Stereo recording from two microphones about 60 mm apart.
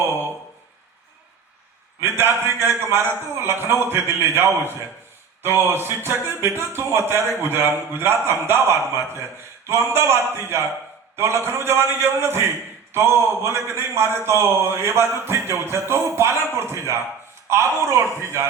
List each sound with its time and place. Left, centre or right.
2.0 s a man's voice: right